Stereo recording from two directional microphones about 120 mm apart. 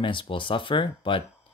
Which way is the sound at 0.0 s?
45° left (ahead or behind).